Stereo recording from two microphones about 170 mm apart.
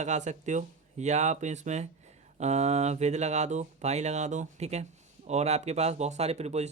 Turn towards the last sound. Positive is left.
turn(degrees=-40)  # may be behind; listen again after turning